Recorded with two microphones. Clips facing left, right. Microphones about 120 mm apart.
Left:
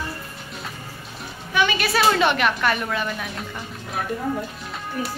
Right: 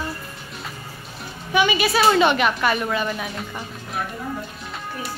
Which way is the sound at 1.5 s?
10° right (ahead or behind).